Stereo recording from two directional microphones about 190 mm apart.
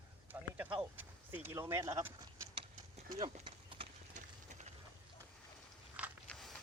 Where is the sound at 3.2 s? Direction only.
30° right (ahead or behind).